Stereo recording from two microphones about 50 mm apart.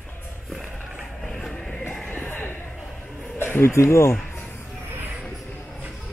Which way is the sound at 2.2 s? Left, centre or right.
Left.